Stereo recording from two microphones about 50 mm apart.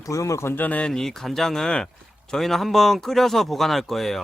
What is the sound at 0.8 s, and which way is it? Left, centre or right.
Speech, centre.